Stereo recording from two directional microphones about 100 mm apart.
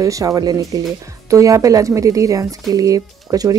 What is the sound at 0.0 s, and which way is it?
Speech, 35° right (ahead or behind).